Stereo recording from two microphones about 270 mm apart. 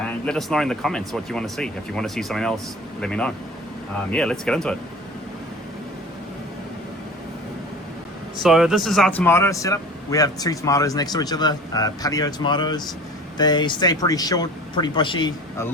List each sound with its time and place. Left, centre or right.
0.0 s speech: centre
8.4 s speech: centre